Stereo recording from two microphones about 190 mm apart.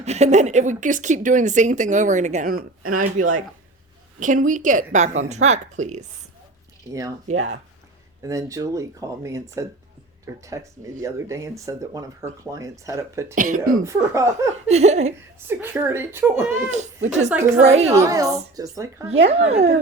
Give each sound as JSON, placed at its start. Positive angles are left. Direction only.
{"t": 0.0, "sound": "speech", "side_deg": -35}
{"t": 7.3, "sound": "speech", "side_deg": -35}
{"t": 8.2, "sound": "speech", "side_deg": -15}
{"t": 13.3, "sound": "speech", "side_deg": -45}
{"t": 14.1, "sound": "speech", "side_deg": -15}
{"t": 14.5, "sound": "speech", "side_deg": -35}
{"t": 15.4, "sound": "speech", "side_deg": -10}
{"t": 16.7, "sound": "speech", "side_deg": -40}
{"t": 17.9, "sound": "speech", "side_deg": -15}
{"t": 19.0, "sound": "speech", "side_deg": -35}